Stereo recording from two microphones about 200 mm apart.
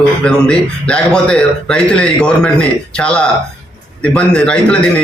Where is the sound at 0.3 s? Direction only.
5° left (ahead or behind).